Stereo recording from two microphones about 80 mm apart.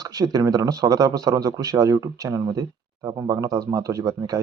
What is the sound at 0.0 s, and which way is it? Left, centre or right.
Speech, right.